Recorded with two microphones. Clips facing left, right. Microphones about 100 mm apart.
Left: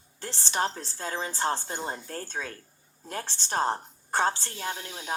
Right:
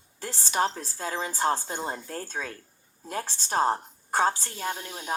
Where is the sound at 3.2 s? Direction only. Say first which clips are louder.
Right 3 dB; 40° right (ahead or behind).